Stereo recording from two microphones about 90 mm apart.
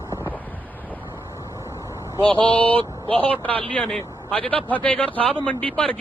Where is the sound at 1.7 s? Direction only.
30° right (ahead or behind).